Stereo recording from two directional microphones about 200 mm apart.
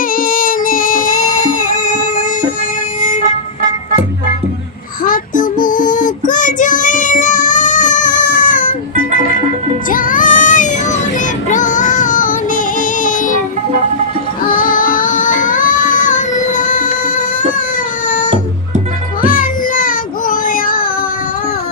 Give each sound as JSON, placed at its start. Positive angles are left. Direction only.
{"t": 0.2, "sound": "music", "side_deg": 45}
{"t": 1.3, "sound": "music", "side_deg": 15}
{"t": 3.0, "sound": "vehicle", "side_deg": 40}
{"t": 5.0, "sound": "child singing", "side_deg": 45}
{"t": 9.9, "sound": "child singing", "side_deg": 40}
{"t": 11.4, "sound": "music", "side_deg": 40}
{"t": 14.4, "sound": "child singing", "side_deg": 40}
{"t": 19.2, "sound": "music", "side_deg": 45}